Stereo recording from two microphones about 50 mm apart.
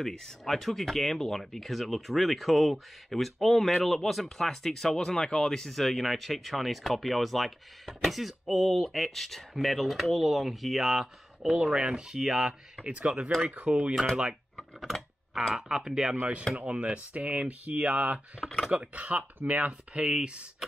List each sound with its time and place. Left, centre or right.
0.0 s speech: centre
11.5 s speech: centre
12.8 s speech: right
14.8 s a sound: centre
15.5 s speech: centre
16.5 s speech: right